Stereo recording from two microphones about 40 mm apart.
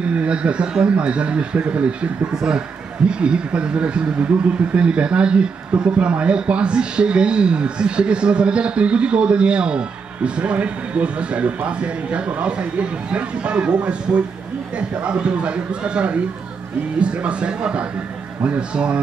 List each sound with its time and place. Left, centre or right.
0.0 s speech: right